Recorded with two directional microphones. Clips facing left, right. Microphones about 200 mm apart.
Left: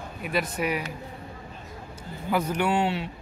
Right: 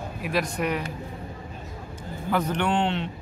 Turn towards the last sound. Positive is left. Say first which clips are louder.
# even
turn(degrees=5)  # may be behind; listen again after turning